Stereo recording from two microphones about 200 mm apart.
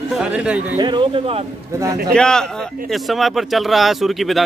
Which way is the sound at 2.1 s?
5° left (ahead or behind).